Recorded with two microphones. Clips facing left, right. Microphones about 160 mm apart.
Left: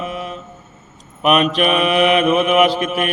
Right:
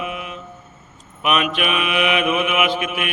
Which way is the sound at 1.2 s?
40° left (ahead or behind).